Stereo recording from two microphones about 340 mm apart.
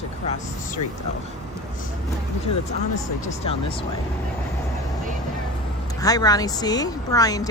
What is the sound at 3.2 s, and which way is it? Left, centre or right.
Speech, centre.